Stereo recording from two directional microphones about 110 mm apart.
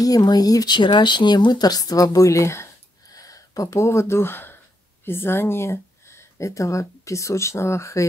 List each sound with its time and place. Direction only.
0.0 s speech: 35° left (ahead or behind)